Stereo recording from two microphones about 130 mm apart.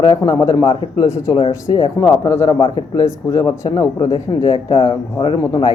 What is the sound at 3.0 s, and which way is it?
Speech, 25° left (ahead or behind).